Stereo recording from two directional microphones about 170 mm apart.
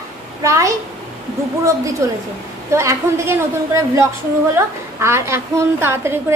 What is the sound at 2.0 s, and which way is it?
A woman's voice, 15° right (ahead or behind).